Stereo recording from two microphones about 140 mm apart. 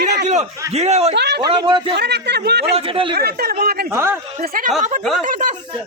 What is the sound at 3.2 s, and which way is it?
Speech, 90° right.